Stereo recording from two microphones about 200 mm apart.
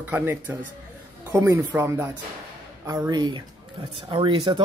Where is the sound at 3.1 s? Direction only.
20° right (ahead or behind).